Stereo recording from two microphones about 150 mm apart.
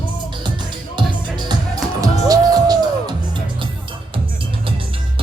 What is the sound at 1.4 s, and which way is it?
Music, 30° right (ahead or behind).